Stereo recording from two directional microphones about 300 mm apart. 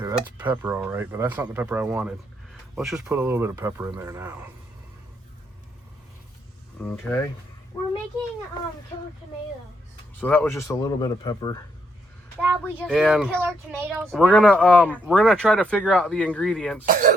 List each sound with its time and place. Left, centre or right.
0.0 s speech: centre
6.8 s speech: centre
10.2 s speech: centre
12.4 s speech: centre
16.8 s speech: right